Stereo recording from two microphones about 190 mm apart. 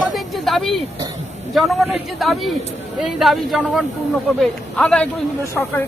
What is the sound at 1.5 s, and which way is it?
A man's voice, centre (ahead or behind).